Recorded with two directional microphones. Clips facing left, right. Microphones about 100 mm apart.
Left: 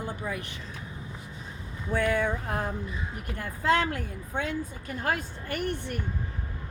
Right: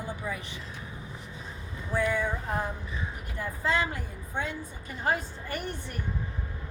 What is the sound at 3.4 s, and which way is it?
Speech, 60° left (ahead or behind).